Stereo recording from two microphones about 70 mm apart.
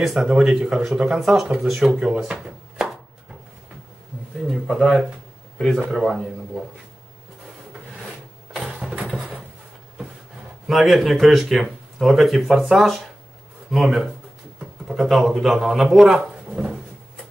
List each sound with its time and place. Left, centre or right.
0.0 s speech: centre
1.9 s a sound: centre
4.5 s speech: centre
8.6 s engine: centre
10.7 s speech: centre